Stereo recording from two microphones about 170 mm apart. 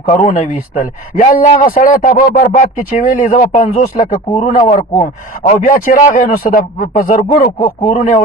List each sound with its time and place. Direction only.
0.2 s a man's voice: 30° left (ahead or behind)
1.1 s speech: 55° left (ahead or behind)
4.3 s a man's voice: 30° left (ahead or behind)
5.6 s a man's voice: 55° left (ahead or behind)